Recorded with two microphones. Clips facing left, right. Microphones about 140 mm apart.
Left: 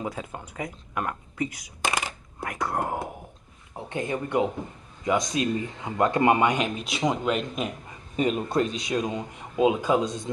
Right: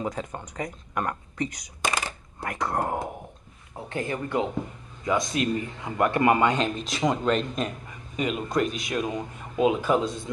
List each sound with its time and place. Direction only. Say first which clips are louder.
0.0 s speech: right 2 dB; 5° left (ahead or behind)
3.7 s speech: left 1 dB; 20° left (ahead or behind)
8.2 s speech: left 2 dB; 35° left (ahead or behind)